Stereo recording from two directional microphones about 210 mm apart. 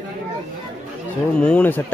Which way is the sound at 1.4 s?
5° left (ahead or behind).